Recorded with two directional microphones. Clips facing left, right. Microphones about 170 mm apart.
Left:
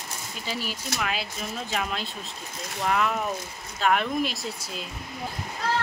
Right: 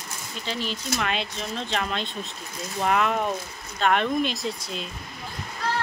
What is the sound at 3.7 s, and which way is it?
Speech, 5° left (ahead or behind).